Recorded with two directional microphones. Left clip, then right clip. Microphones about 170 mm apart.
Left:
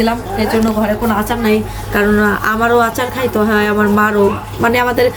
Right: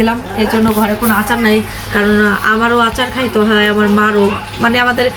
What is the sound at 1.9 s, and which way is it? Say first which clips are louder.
Speech: right 2 dB; 50° left (ahead or behind).